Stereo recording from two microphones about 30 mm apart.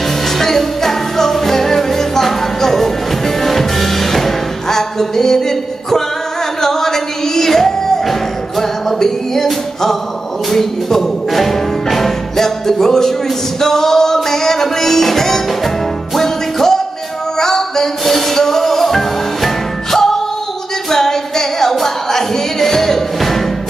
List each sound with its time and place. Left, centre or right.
0.4 s music: centre